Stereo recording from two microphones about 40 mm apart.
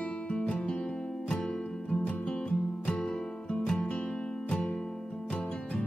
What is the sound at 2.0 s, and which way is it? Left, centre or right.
Music, left.